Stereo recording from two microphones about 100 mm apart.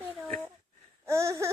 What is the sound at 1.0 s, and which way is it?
Speech, 30° right (ahead or behind).